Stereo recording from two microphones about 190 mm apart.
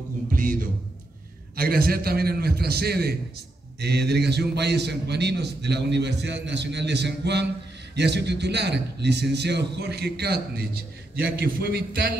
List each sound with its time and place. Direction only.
0.3 s music: 45° right (ahead or behind)
1.6 s a man's voice: 50° right (ahead or behind)